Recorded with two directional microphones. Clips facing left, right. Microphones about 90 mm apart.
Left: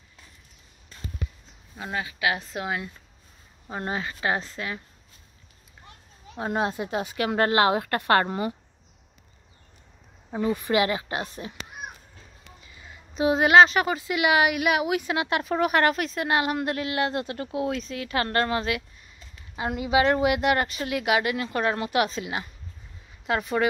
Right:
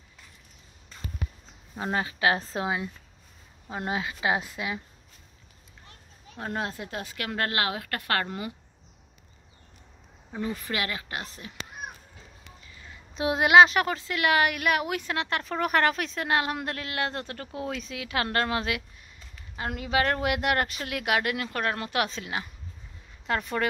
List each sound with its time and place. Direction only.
1.8 s a woman's voice: 35° right (ahead or behind)
3.7 s speech: 5° right (ahead or behind)
6.3 s speech: 15° left (ahead or behind); by 8.5 s 30° left (ahead or behind)
10.3 s speech: 20° left (ahead or behind)
12.8 s a woman's voice: 5° left (ahead or behind)
19.5 s a woman's voice: 10° left (ahead or behind)